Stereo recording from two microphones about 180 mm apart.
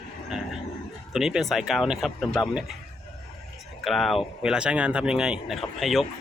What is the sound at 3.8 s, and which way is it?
Speech, centre (ahead or behind).